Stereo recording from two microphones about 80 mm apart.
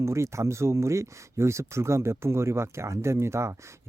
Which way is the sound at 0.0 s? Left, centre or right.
Right.